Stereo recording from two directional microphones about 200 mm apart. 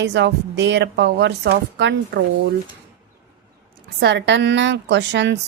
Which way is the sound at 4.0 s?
60° right (ahead or behind).